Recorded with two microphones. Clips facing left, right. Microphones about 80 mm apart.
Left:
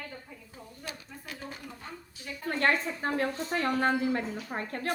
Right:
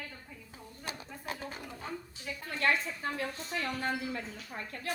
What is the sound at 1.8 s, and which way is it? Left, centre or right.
Speech, centre.